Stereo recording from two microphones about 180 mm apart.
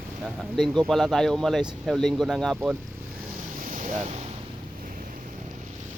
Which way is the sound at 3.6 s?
45° right (ahead or behind).